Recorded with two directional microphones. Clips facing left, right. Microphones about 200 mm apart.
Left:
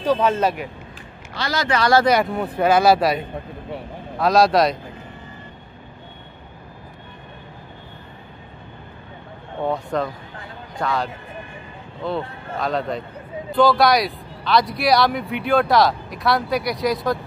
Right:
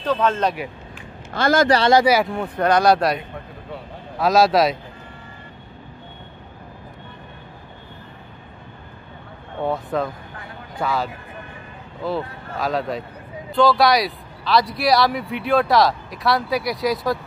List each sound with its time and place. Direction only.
0.0 s speech: 10° left (ahead or behind)
1.3 s speech: 50° right (ahead or behind)
2.0 s speech: centre (ahead or behind)
4.2 s speech: centre (ahead or behind)
9.7 s speech: centre (ahead or behind)